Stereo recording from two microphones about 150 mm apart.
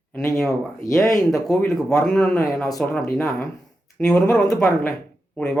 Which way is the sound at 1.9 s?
5° left (ahead or behind).